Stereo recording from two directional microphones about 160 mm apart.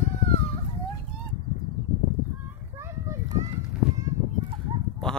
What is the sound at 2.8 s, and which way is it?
Children playing, 20° right (ahead or behind).